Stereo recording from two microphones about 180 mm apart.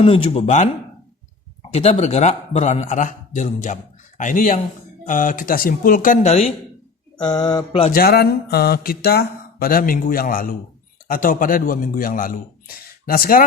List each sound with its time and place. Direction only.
0.0 s a man's voice: 35° left (ahead or behind)
1.7 s a man's voice: 35° left (ahead or behind)
7.3 s mantra: 20° left (ahead or behind)
7.9 s a man's voice: 55° left (ahead or behind)